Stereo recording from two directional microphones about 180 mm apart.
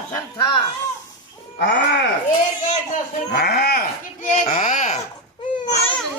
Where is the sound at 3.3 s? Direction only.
65° left (ahead or behind).